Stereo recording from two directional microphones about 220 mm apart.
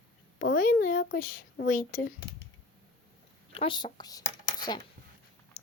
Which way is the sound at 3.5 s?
25° left (ahead or behind).